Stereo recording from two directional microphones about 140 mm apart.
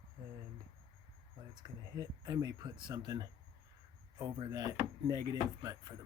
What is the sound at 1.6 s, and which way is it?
Speech, 25° right (ahead or behind).